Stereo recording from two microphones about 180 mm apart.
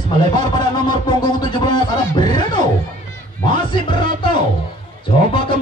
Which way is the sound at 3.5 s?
25° left (ahead or behind).